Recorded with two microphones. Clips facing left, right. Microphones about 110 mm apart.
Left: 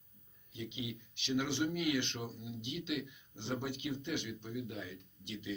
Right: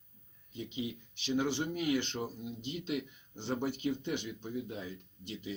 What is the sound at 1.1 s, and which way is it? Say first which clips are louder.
Speech: right 3 dB; 35° right (ahead or behind).